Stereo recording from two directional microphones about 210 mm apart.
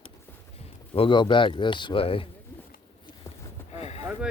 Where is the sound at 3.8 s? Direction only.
30° left (ahead or behind).